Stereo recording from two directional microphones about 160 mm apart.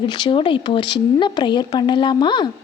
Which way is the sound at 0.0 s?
30° left (ahead or behind).